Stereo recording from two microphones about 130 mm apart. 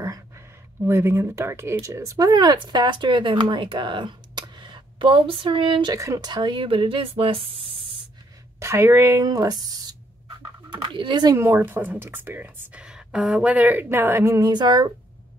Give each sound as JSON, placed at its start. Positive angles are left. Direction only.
{"t": 0.8, "sound": "speech", "side_deg": -20}
{"t": 5.9, "sound": "speech", "side_deg": -25}
{"t": 8.5, "sound": "speech", "side_deg": -20}
{"t": 10.7, "sound": "speech", "side_deg": -40}
{"t": 11.3, "sound": "speech", "side_deg": -20}
{"t": 14.5, "sound": "speech", "side_deg": -35}